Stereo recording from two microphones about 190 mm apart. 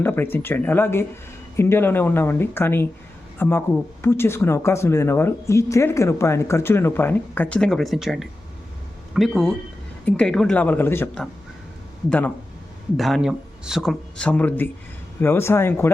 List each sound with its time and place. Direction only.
0.0 s speech: 10° left (ahead or behind)